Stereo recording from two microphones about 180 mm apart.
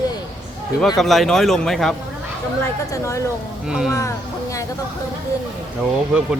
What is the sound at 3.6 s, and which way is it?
Speech, 5° right (ahead or behind).